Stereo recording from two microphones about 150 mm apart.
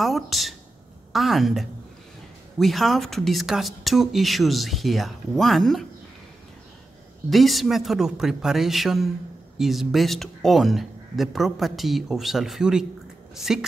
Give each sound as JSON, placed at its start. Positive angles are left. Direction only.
{"t": 0.0, "sound": "speech", "side_deg": 0}
{"t": 7.2, "sound": "speech", "side_deg": 0}